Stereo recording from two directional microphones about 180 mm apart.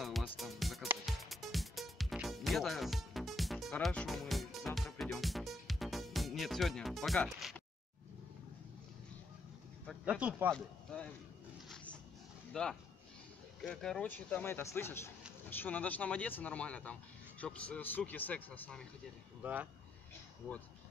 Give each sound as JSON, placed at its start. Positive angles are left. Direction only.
{"t": 0.0, "sound": "music", "side_deg": 0}
{"t": 9.8, "sound": "speech", "side_deg": -5}
{"t": 10.5, "sound": "speech", "side_deg": 5}
{"t": 11.7, "sound": "dog", "side_deg": 5}
{"t": 12.6, "sound": "speech", "side_deg": 5}
{"t": 19.4, "sound": "speech", "side_deg": -10}